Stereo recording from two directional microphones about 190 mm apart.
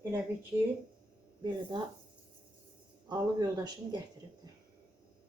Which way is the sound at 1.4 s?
25° right (ahead or behind).